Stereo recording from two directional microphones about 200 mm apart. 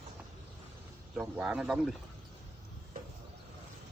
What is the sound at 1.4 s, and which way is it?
Speech, 5° right (ahead or behind).